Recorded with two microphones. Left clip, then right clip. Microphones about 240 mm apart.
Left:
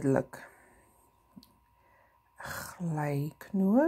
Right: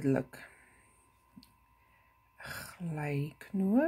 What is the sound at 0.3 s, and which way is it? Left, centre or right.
Speech, centre.